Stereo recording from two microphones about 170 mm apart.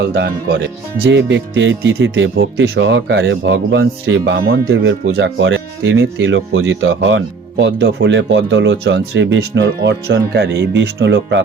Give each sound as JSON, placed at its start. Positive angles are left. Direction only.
{"t": 0.0, "sound": "speech", "side_deg": -70}
{"t": 1.1, "sound": "speech", "side_deg": -90}